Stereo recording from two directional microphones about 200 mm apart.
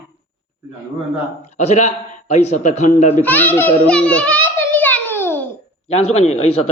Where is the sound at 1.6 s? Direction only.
35° left (ahead or behind).